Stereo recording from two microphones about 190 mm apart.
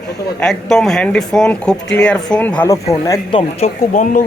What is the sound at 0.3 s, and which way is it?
A man's voice, centre (ahead or behind).